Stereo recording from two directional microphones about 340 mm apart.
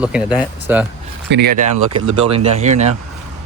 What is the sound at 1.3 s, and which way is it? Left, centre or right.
Speech, right.